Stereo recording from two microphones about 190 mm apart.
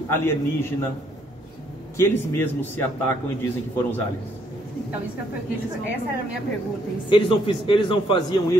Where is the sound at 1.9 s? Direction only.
10° left (ahead or behind).